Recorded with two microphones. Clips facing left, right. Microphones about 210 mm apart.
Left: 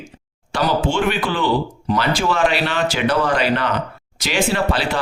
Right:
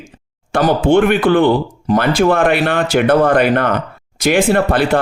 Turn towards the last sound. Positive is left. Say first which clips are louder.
# right 6 dB
turn(degrees=-55)  # may be behind; listen again after turning